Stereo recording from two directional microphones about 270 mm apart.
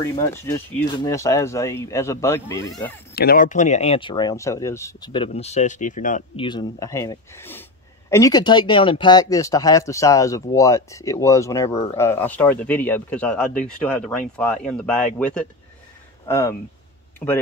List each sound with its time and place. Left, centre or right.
0.0 s speech: centre
3.2 s speech: left; by 17.4 s centre